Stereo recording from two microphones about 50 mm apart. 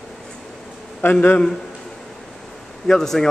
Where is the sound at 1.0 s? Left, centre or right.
Left.